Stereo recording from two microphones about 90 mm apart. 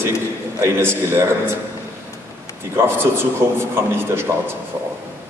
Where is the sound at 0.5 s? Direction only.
30° right (ahead or behind).